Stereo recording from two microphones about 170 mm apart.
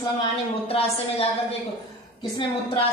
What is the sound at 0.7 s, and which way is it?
Speech, 35° left (ahead or behind).